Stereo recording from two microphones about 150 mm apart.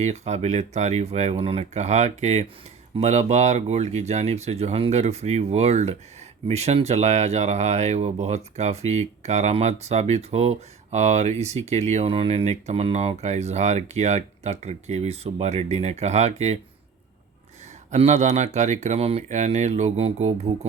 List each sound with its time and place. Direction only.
0.0 s speech: 50° right (ahead or behind)
17.9 s speech: 45° right (ahead or behind)